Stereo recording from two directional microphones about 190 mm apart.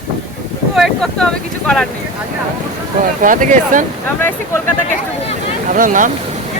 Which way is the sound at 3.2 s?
45° right (ahead or behind).